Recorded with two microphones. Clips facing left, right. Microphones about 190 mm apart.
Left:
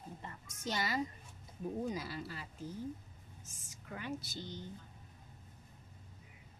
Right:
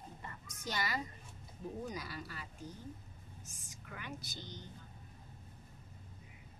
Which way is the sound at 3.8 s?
30° left (ahead or behind).